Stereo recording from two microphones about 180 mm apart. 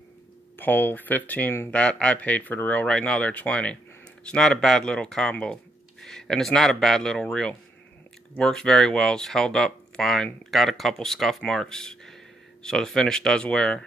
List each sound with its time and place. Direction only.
0.6 s speech: 10° left (ahead or behind)